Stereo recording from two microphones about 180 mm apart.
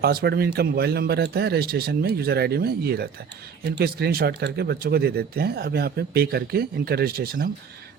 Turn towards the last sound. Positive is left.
turn(degrees=-55)  # may be behind; listen again after turning